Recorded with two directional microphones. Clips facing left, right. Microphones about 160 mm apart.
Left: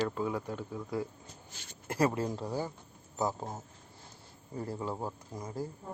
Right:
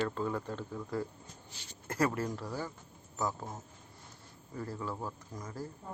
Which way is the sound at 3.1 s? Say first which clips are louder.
Left 3 dB; 30° left (ahead or behind).